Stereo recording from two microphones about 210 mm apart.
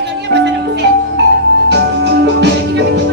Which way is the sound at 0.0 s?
55° right (ahead or behind).